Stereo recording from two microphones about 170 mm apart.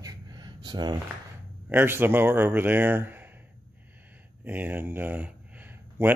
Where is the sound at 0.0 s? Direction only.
25° right (ahead or behind).